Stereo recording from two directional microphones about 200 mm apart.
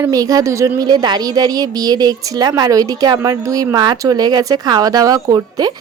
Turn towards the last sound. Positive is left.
turn(degrees=-20)  # may be behind; listen again after turning